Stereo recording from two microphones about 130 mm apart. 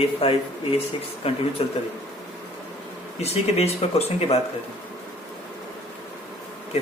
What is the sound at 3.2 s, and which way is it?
A man's voice, 55° left (ahead or behind).